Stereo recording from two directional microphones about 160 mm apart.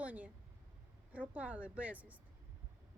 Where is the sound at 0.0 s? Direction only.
10° right (ahead or behind).